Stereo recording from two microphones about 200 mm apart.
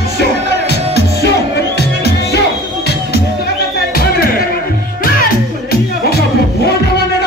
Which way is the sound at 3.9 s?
50° left (ahead or behind).